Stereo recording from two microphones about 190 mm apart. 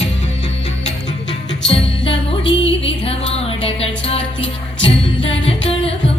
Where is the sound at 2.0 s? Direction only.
70° left (ahead or behind).